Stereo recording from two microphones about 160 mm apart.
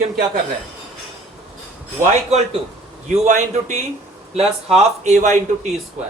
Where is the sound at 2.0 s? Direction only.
45° right (ahead or behind).